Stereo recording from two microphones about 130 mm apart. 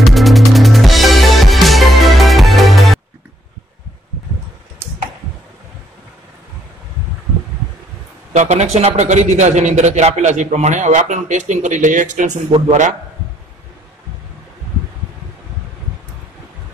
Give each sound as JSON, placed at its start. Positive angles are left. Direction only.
{"t": 0.0, "sound": "music", "side_deg": 0}
{"t": 8.3, "sound": "a sound", "side_deg": -60}
{"t": 8.7, "sound": "a man's voice", "side_deg": -60}
{"t": 12.4, "sound": "a man's voice", "side_deg": -55}